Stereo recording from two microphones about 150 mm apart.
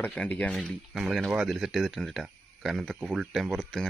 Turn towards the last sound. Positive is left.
turn(degrees=5)  # may be behind; listen again after turning